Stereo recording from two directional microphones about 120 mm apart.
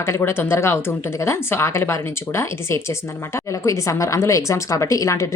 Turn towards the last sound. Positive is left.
turn(degrees=25)  # may be behind; listen again after turning